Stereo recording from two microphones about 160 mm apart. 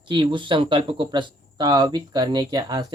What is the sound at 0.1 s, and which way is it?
Speech, 30° right (ahead or behind).